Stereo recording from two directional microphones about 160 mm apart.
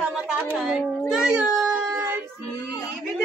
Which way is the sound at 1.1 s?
5° right (ahead or behind).